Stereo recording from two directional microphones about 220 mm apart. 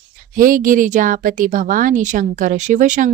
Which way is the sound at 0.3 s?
40° right (ahead or behind).